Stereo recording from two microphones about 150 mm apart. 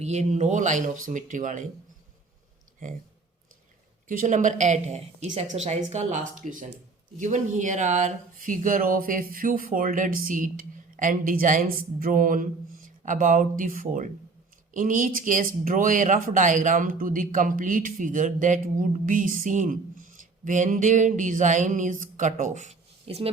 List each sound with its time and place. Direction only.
0.0 s speech: 50° right (ahead or behind)
4.1 s speech: 60° right (ahead or behind); by 23.3 s 40° right (ahead or behind)